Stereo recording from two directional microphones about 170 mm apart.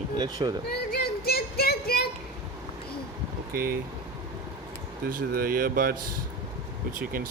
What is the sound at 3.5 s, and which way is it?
Speech, 60° right (ahead or behind).